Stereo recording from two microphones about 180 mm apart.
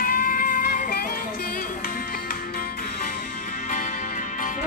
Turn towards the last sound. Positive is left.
turn(degrees=45)  # may be behind; listen again after turning